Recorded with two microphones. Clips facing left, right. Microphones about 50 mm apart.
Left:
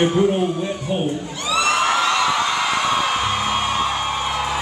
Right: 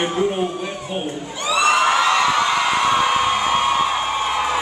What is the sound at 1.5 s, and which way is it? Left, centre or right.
Crowd, centre.